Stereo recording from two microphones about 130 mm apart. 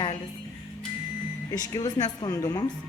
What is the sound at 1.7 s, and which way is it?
Speech, 30° left (ahead or behind).